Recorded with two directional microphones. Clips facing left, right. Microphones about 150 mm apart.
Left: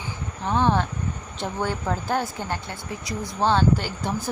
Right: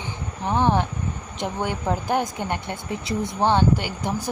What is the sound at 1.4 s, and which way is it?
Speech, 15° right (ahead or behind).